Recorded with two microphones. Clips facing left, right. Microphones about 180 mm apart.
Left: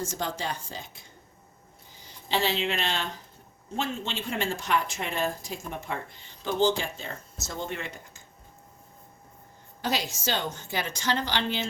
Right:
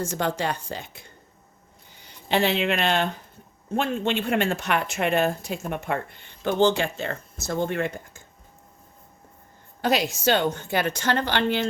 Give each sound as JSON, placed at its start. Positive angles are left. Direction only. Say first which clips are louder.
{"t": 0.0, "sound": "speech", "louder": "right 6 dB", "side_deg": -60}
{"t": 9.8, "sound": "speech", "louder": "right 7 dB", "side_deg": -60}